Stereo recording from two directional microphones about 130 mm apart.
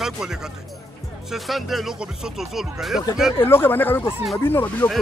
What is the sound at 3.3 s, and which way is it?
Speech, 15° left (ahead or behind).